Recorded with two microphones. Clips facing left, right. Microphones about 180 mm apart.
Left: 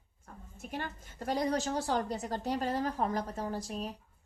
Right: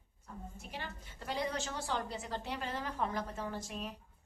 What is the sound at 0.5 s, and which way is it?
A woman's voice, 50° left (ahead or behind).